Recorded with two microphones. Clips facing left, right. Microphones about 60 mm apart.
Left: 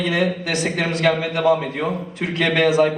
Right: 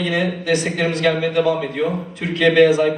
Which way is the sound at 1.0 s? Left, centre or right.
Left.